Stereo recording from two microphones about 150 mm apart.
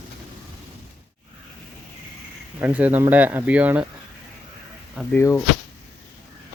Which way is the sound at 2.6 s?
10° right (ahead or behind).